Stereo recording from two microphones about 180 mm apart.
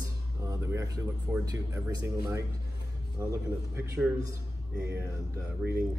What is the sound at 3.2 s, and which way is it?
A man's voice, 15° right (ahead or behind).